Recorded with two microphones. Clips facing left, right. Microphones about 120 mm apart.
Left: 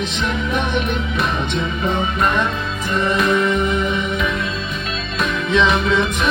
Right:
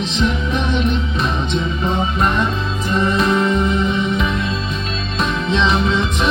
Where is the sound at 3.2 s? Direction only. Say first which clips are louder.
Left 1 dB; 25° right (ahead or behind).